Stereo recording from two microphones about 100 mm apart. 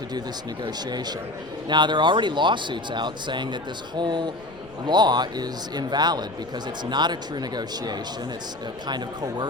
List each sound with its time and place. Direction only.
0.6 s speech: 45° right (ahead or behind)